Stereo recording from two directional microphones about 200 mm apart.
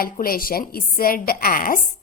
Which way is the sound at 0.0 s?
45° left (ahead or behind).